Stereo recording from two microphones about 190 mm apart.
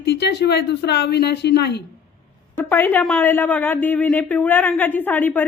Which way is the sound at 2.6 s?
10° left (ahead or behind).